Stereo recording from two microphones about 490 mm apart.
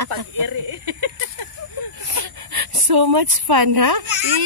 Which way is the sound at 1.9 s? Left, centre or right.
Right.